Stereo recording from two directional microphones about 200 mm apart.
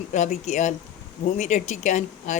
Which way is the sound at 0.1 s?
35° left (ahead or behind).